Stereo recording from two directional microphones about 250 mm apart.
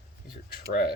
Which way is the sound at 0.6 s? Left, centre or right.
Left.